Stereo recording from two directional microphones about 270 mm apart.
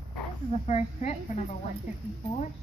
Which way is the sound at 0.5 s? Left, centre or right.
Left.